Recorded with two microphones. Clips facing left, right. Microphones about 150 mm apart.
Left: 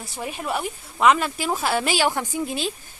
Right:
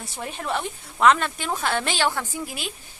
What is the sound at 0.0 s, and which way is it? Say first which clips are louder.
A woman's voice: left 2 dB; centre (ahead or behind).